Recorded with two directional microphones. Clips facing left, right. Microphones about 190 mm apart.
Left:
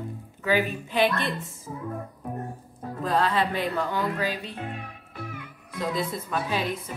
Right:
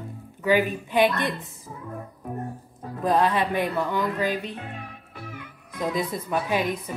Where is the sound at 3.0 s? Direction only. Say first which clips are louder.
Right 3 dB; 20° right (ahead or behind).